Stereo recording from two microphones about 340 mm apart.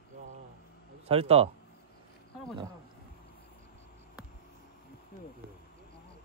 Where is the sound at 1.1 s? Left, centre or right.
Centre.